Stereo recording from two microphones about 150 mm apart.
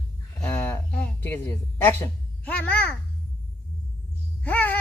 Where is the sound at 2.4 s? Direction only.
10° left (ahead or behind).